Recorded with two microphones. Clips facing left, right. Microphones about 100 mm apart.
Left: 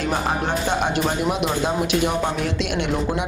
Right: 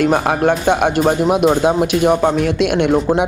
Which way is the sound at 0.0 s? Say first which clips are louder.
Right 9 dB; 55° right (ahead or behind).